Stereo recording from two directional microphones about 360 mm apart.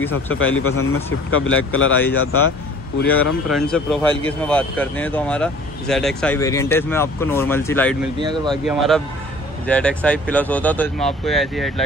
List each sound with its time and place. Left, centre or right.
0.1 s speech: left
3.4 s speech: centre
8.2 s speech: centre
8.6 s speech: centre